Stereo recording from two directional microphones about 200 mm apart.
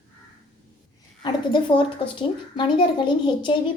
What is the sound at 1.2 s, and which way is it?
A woman's voice, 20° left (ahead or behind).